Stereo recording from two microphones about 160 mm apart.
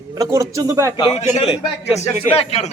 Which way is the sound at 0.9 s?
35° left (ahead or behind).